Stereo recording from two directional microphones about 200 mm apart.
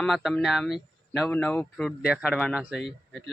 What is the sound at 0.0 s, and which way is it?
A man's voice, centre (ahead or behind).